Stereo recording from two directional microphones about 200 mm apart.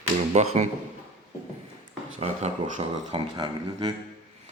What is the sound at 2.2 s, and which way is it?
Speech, 30° right (ahead or behind).